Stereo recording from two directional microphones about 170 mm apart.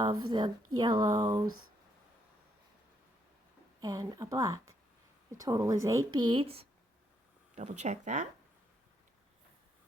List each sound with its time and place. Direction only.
0.0 s speech: 25° right (ahead or behind)
3.8 s speech: 20° right (ahead or behind); by 8.3 s 45° right (ahead or behind)